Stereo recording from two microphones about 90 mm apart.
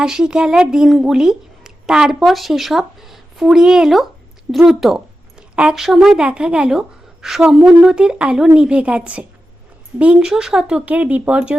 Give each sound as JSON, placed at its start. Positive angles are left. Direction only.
{"t": 0.0, "sound": "speech", "side_deg": -10}